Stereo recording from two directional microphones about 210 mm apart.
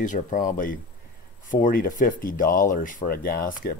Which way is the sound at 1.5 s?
40° left (ahead or behind).